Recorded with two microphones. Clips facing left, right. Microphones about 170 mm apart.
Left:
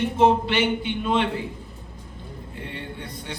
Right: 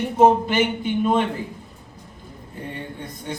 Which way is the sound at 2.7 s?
45° right (ahead or behind).